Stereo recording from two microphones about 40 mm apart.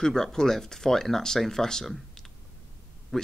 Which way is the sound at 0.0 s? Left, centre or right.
Centre.